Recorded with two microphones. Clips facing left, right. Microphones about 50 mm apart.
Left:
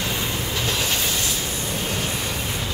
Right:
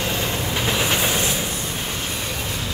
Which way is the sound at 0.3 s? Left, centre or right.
Right.